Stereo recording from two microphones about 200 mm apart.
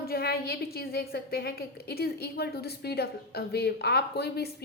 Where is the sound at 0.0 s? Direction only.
50° left (ahead or behind).